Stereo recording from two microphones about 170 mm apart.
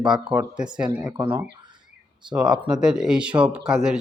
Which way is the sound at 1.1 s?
15° right (ahead or behind).